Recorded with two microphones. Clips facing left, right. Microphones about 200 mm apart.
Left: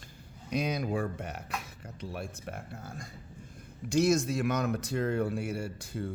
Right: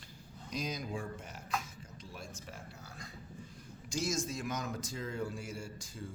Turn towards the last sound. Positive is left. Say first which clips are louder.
# left 9 dB
turn(degrees=65)  # may be behind; listen again after turning